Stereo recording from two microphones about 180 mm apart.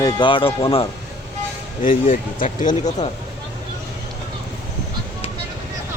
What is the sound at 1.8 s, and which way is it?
Speech, 45° left (ahead or behind).